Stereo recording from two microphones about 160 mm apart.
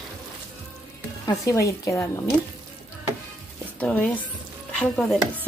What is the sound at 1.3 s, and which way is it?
Speech, 20° left (ahead or behind).